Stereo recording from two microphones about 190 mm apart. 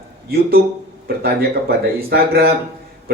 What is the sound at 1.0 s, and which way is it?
Speech, 55° right (ahead or behind).